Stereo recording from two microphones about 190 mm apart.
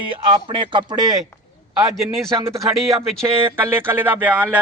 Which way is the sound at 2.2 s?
15° right (ahead or behind).